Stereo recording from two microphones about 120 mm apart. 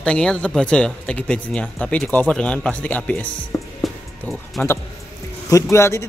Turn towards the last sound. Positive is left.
turn(degrees=25)  # may be behind; listen again after turning